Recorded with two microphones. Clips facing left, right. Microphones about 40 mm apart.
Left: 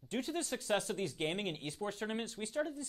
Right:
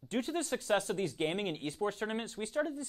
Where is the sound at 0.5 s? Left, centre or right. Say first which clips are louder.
Right 4 dB; centre.